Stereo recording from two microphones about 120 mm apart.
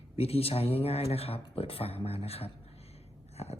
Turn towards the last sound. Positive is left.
turn(degrees=60)  # may be behind; listen again after turning